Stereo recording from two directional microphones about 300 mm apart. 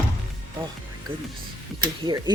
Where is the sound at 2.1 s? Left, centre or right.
Centre.